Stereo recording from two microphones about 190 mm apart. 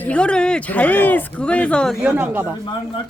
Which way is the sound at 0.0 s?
5° left (ahead or behind).